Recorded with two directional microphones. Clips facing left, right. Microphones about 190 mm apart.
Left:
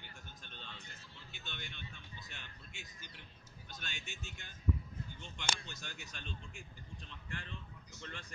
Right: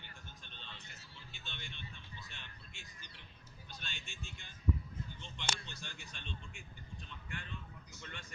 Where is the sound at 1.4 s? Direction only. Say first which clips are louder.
Left 2 dB; 45° left (ahead or behind).